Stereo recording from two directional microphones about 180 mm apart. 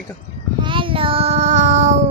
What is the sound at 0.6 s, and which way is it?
Child singing, 30° right (ahead or behind).